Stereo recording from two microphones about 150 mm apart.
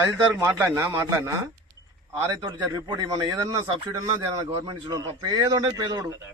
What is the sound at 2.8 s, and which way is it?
Speech, 30° right (ahead or behind).